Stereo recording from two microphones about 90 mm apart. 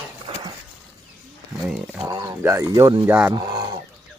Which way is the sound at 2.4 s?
25° right (ahead or behind).